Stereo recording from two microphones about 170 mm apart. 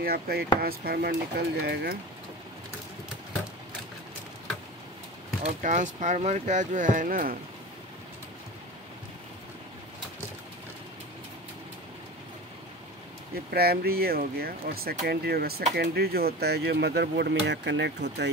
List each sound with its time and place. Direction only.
0.0 s speech: 65° right (ahead or behind)
5.4 s speech: 45° right (ahead or behind)
13.5 s speech: 65° right (ahead or behind); by 18.3 s 90° right